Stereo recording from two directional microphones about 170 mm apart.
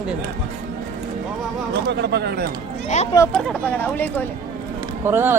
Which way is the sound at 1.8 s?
80° right.